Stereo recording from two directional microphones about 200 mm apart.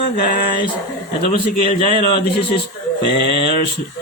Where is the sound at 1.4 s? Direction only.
25° left (ahead or behind).